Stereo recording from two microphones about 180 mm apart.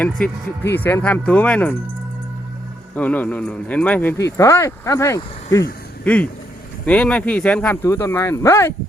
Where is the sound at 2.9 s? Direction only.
10° left (ahead or behind).